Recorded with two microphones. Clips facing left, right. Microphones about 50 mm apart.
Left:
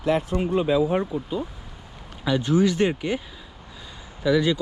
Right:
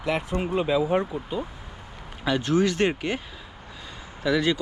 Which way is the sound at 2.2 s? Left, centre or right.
Right.